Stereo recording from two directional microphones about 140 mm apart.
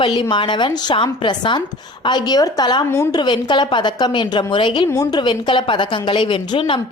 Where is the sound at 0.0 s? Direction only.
35° left (ahead or behind).